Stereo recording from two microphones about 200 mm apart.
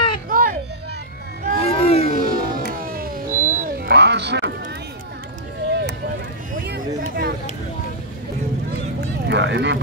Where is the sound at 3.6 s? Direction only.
50° right (ahead or behind).